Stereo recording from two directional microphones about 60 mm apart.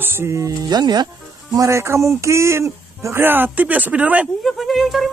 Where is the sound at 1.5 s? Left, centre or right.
Right.